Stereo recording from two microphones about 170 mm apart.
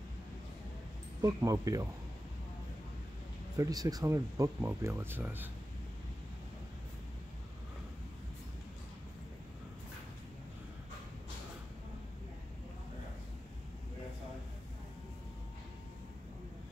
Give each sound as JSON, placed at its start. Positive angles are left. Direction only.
{"t": 1.2, "sound": "speech", "side_deg": -20}
{"t": 3.5, "sound": "speech", "side_deg": -20}